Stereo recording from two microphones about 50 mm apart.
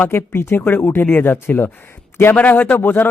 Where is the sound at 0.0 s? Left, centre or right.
Left.